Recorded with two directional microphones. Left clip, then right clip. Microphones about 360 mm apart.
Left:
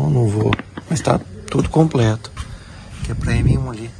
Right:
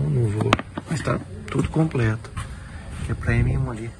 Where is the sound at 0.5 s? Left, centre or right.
Centre.